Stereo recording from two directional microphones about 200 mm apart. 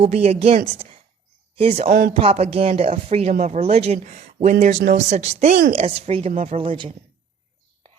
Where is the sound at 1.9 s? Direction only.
45° right (ahead or behind).